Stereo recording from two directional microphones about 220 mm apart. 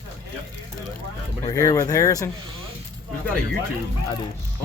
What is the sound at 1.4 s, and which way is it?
Speech, 15° left (ahead or behind).